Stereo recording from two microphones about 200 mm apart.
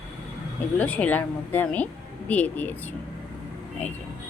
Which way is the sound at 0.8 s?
5° left (ahead or behind).